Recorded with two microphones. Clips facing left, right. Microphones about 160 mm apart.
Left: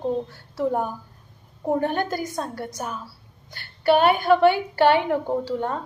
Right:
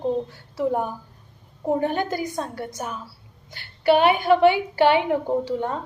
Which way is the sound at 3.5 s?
15° right (ahead or behind).